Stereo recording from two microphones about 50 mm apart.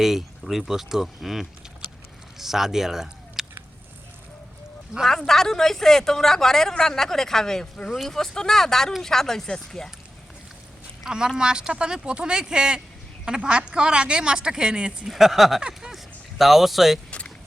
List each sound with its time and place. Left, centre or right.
0.0 s speech: centre
5.0 s speech: centre
11.0 s speech: centre
15.0 s speech: centre
15.6 s a sound: centre
16.4 s speech: centre
17.1 s a sound: left